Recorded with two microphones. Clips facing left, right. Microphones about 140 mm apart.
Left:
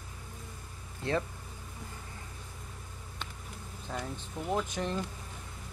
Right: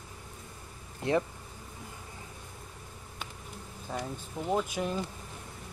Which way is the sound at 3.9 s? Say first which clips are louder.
Right 2 dB; 5° right (ahead or behind).